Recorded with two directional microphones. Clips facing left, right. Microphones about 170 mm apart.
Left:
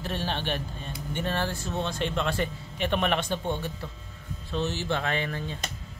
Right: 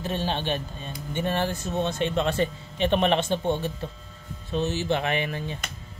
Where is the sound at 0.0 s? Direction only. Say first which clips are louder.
Right 3 dB; 20° right (ahead or behind).